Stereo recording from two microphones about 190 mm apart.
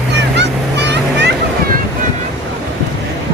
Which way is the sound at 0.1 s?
65° right (ahead or behind).